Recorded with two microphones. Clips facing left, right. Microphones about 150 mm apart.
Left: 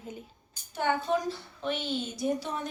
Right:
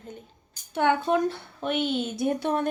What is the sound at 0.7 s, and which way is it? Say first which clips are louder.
A woman's voice: right 5 dB; 65° right (ahead or behind).